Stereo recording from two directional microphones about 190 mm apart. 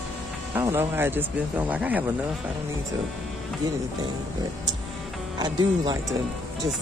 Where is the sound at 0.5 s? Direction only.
15° right (ahead or behind).